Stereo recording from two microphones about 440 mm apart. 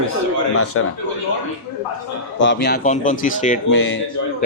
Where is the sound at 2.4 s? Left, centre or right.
Left.